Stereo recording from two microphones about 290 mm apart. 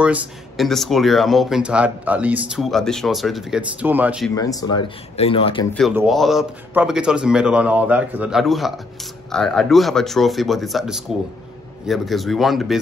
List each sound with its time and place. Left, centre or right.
0.0 s speech: centre
4.4 s speech: centre
5.8 s speech: centre